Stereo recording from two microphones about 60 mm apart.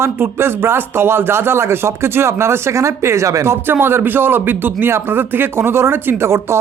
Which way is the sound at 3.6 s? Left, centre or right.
Right.